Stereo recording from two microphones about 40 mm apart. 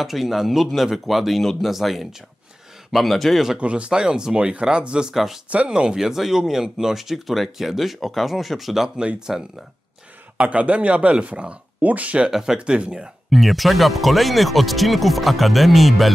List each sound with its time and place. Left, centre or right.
0.0 s speech: centre
3.5 s speech: right
5.1 s speech: centre
5.7 s speech: right
5.9 s speech: centre
8.9 s speech: right
10.3 s speech: right
12.3 s speech: centre
12.5 s speech: right
13.3 s speech: centre